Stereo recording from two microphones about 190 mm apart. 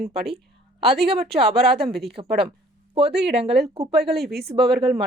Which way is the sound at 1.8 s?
Centre (ahead or behind).